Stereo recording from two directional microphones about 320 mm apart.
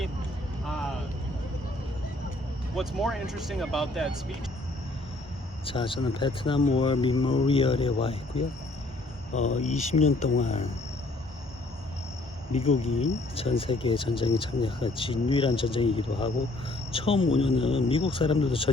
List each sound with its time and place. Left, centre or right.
2.7 s speech: centre
5.6 s speech: centre
9.6 s speech: centre
12.5 s speech: centre